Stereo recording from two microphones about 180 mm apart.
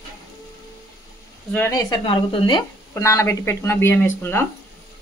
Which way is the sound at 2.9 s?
15° left (ahead or behind).